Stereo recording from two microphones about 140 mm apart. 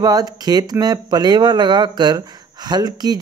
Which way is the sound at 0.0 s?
25° right (ahead or behind).